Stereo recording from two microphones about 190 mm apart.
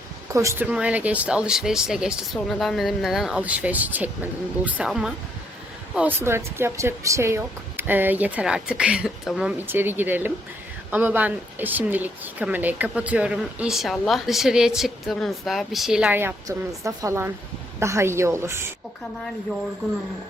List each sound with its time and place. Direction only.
0.3 s speech: 15° right (ahead or behind)